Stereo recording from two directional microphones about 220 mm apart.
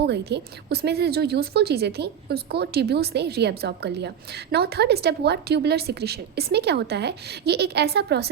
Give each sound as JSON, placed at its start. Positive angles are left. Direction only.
{"t": 0.0, "sound": "a woman's voice", "side_deg": -50}